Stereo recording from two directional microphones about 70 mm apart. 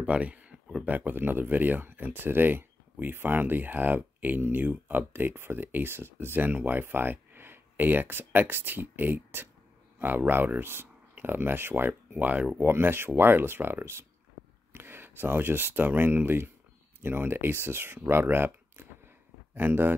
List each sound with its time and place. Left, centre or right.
0.0 s a sound: centre
0.8 s speech: right
12.5 s speech: right